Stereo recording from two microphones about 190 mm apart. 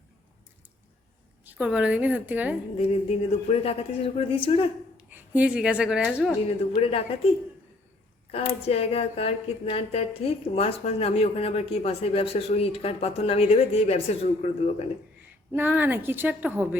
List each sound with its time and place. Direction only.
1.5 s a woman's voice: 5° right (ahead or behind)
2.7 s speech: 30° left (ahead or behind)
5.1 s a woman's voice: 10° right (ahead or behind)
6.7 s speech: 30° left (ahead or behind)
8.3 s speech: 30° left (ahead or behind)
15.5 s a woman's voice: 10° right (ahead or behind)